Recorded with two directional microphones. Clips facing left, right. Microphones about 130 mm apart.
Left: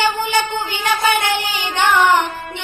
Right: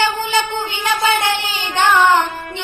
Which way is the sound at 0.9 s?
25° right (ahead or behind).